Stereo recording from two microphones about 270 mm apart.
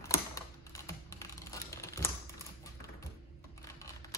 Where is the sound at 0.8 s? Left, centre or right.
Centre.